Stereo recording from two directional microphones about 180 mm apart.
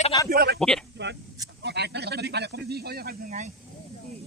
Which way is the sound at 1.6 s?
70° right (ahead or behind).